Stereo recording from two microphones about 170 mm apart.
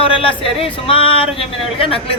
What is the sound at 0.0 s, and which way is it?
Speech, 30° left (ahead or behind).